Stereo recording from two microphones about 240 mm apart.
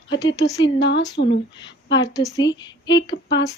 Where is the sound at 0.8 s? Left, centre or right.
Left.